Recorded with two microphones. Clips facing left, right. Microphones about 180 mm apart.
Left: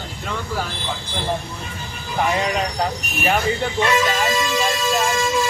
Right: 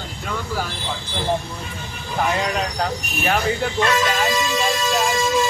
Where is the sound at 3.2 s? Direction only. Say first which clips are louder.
Left 1 dB; 5° left (ahead or behind).